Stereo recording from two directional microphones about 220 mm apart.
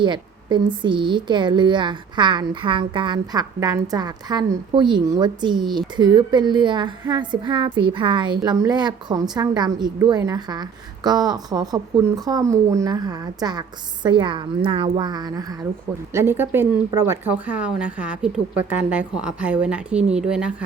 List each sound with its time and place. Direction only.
0.0 s speech: 20° right (ahead or behind); by 20.7 s 5° right (ahead or behind)